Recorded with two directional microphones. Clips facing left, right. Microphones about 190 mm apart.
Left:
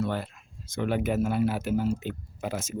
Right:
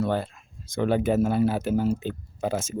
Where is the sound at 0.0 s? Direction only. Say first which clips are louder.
Right 4 dB; 35° right (ahead or behind).